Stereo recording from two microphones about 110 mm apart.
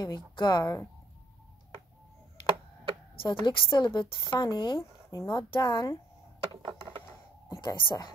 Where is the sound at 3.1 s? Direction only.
45° left (ahead or behind).